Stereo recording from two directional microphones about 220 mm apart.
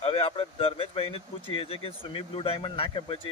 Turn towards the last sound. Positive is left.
turn(degrees=25)  # may be behind; listen again after turning